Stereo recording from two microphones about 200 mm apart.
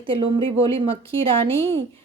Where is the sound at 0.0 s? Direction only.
25° right (ahead or behind).